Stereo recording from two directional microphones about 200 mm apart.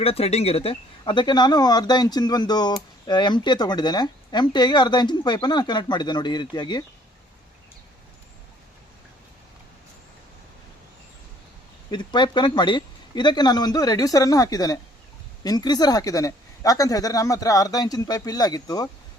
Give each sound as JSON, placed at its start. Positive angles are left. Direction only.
{"t": 0.0, "sound": "speech", "side_deg": 30}
{"t": 11.9, "sound": "speech", "side_deg": 20}